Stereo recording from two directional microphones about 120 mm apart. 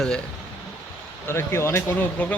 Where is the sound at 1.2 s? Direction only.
20° left (ahead or behind).